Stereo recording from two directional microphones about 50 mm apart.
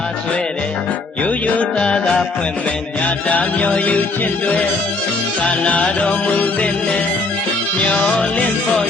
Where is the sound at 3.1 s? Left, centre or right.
Left.